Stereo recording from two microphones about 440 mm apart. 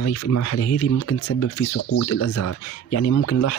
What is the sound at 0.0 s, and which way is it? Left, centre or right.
Speech, left.